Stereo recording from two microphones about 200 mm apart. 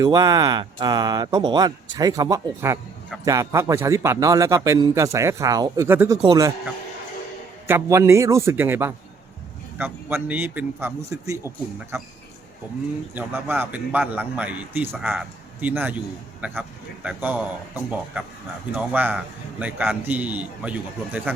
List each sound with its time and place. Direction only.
0.0 s a man's voice: 20° right (ahead or behind)
7.7 s a man's voice: 15° right (ahead or behind)
13.1 s a man's voice: 10° right (ahead or behind)
18.7 s a man's voice: 5° right (ahead or behind)